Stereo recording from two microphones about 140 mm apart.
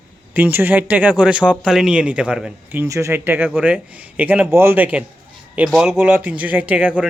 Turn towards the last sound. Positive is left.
turn(degrees=-10)  # may be behind; listen again after turning